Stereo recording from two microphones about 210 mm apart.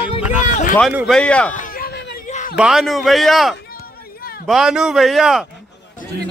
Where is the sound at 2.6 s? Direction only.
Centre (ahead or behind).